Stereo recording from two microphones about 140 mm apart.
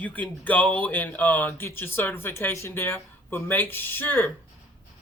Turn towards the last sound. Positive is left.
turn(degrees=15)  # may be behind; listen again after turning